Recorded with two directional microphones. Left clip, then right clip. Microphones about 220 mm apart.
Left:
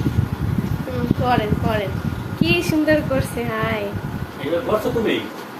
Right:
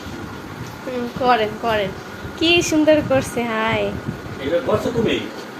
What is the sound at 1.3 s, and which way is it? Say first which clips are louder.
A woman's voice: right 4 dB; 20° right (ahead or behind).